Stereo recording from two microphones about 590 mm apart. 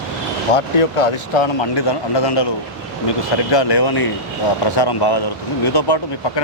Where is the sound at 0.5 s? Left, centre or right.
Left.